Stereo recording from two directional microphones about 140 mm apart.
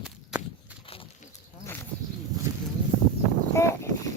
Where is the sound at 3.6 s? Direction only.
20° left (ahead or behind).